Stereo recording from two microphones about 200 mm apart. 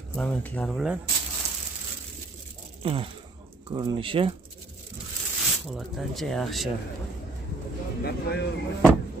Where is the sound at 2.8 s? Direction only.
30° right (ahead or behind).